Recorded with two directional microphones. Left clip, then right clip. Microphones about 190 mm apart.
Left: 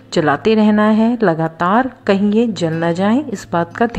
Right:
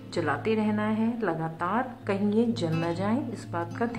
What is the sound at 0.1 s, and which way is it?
A woman's voice, 35° left (ahead or behind).